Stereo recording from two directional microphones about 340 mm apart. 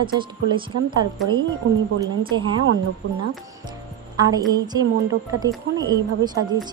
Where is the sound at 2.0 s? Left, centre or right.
Centre.